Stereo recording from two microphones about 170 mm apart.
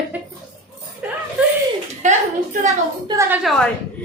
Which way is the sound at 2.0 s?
45° right (ahead or behind).